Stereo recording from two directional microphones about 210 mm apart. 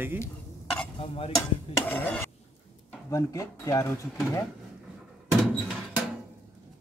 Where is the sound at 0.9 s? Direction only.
25° left (ahead or behind).